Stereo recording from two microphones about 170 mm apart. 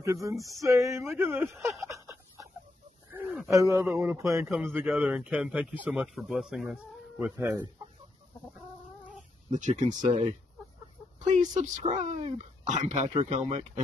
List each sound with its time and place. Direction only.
0.0 s a man's voice: 20° right (ahead or behind)
2.0 s a sound: 20° right (ahead or behind)
3.5 s a man's voice: 15° right (ahead or behind)
9.6 s speech: 45° right (ahead or behind)